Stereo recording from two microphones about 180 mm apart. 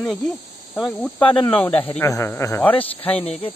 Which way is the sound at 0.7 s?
Centre (ahead or behind).